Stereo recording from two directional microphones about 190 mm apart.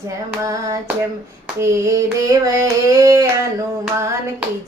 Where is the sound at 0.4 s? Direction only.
20° right (ahead or behind).